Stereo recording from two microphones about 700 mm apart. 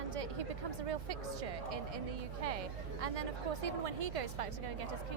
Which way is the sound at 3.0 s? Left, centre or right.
Right.